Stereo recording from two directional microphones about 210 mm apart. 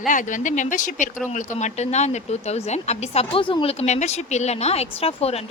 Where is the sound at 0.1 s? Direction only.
40° left (ahead or behind).